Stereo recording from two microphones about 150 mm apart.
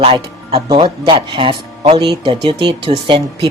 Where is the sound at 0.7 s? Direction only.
35° right (ahead or behind).